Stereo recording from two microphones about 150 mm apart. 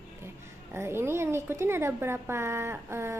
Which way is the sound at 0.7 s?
15° right (ahead or behind).